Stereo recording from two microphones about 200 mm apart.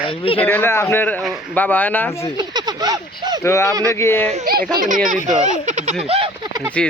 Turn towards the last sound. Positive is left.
turn(degrees=-25)  # may be behind; listen again after turning